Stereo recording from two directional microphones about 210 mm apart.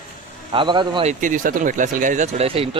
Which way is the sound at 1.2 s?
40° right (ahead or behind).